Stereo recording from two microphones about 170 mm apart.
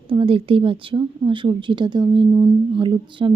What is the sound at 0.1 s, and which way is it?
Speech, 30° right (ahead or behind).